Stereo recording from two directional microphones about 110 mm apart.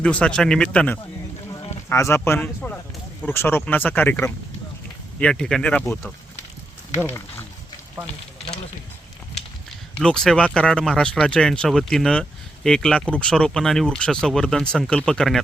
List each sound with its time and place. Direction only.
0.0 s speech: 10° left (ahead or behind)
1.9 s speech: 25° left (ahead or behind)
5.2 s speech: 5° left (ahead or behind)
10.0 s speech: 5° left (ahead or behind)